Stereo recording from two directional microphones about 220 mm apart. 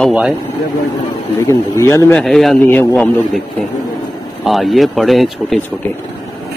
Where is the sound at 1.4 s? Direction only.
15° left (ahead or behind).